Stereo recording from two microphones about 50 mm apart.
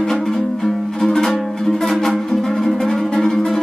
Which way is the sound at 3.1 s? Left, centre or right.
Centre.